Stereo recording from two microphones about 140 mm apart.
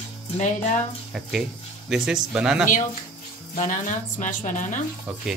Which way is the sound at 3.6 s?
65° left (ahead or behind).